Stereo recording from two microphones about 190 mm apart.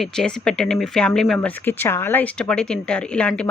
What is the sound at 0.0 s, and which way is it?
Speech, 5° left (ahead or behind).